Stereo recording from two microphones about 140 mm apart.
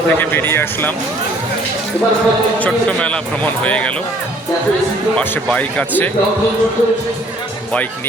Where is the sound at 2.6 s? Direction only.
10° left (ahead or behind).